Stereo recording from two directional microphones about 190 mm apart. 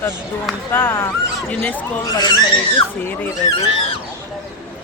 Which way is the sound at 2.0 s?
20° left (ahead or behind).